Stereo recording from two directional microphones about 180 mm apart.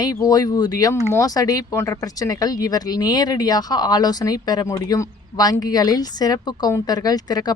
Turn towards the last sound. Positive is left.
turn(degrees=20)  # may be behind; listen again after turning